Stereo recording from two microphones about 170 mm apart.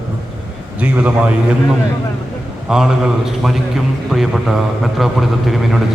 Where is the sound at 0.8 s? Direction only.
10° right (ahead or behind).